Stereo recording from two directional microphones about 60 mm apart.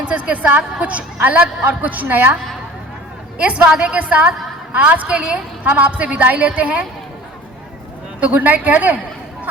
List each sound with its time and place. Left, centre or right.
0.0 s a woman's voice: right
3.3 s a woman's voice: right
8.2 s a woman's voice: right